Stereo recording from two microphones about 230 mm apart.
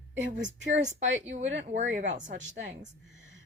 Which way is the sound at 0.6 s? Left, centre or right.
Right.